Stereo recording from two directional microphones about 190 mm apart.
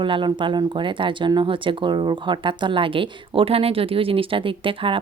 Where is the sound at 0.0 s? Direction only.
25° right (ahead or behind).